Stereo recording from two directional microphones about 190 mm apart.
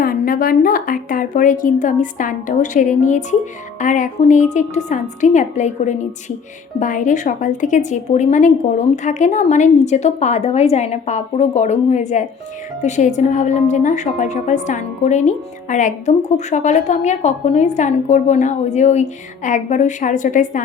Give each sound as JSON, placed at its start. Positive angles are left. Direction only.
{"t": 0.0, "sound": "a woman's voice", "side_deg": 50}